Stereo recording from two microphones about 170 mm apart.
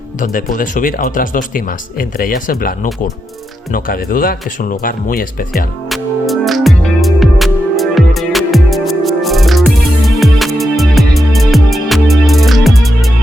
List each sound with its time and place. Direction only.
0.2 s speech: 50° left (ahead or behind)
5.9 s music: centre (ahead or behind)